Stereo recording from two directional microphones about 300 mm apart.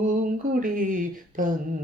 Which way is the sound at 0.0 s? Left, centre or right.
Right.